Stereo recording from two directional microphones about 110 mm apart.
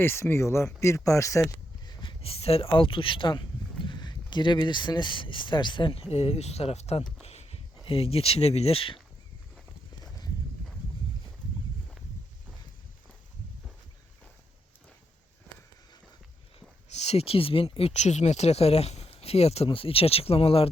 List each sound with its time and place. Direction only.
0.0 s speech: 20° left (ahead or behind); by 7.0 s 70° left (ahead or behind)
7.2 s a sound: 70° left (ahead or behind)
16.9 s speech: 85° left
19.6 s speech: 55° left (ahead or behind)